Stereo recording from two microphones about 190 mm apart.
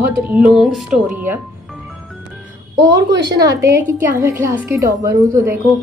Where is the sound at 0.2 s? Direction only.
5° right (ahead or behind).